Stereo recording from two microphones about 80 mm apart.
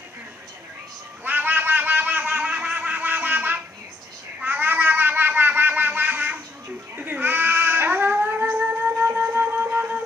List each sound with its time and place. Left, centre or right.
1.2 s a sound: right
4.4 s music: right
7.0 s baby cry: right
8.5 s music: right